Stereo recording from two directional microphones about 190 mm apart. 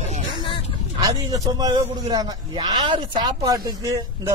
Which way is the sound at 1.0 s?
20° right (ahead or behind).